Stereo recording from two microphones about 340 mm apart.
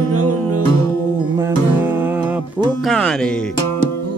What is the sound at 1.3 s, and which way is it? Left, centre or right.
Music, centre.